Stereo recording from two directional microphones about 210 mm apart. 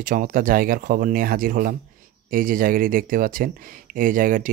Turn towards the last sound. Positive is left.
turn(degrees=-40)  # may be behind; listen again after turning